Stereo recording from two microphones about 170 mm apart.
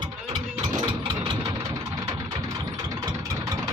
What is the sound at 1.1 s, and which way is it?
Engine, 30° right (ahead or behind).